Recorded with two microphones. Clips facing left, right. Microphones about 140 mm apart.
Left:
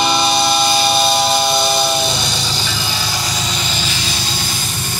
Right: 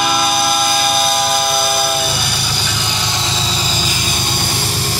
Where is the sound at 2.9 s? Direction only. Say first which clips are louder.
Right 1 dB; 20° right (ahead or behind).